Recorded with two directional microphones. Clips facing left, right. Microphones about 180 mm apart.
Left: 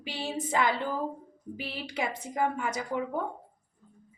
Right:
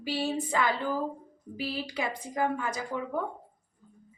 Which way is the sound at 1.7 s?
25° left (ahead or behind).